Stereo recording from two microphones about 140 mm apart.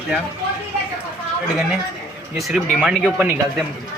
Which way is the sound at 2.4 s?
5° right (ahead or behind).